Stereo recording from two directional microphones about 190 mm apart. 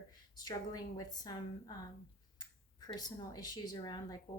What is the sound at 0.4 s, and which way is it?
Speech, 20° left (ahead or behind).